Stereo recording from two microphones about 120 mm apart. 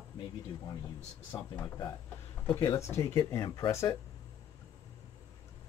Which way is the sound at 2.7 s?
20° left (ahead or behind).